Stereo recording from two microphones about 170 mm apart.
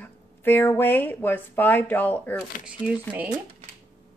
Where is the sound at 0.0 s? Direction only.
10° left (ahead or behind).